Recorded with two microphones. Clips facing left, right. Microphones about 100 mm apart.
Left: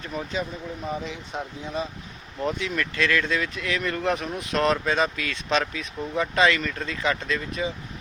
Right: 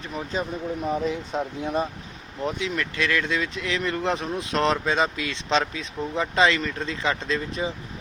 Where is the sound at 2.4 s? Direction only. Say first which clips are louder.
Even; 15° right (ahead or behind).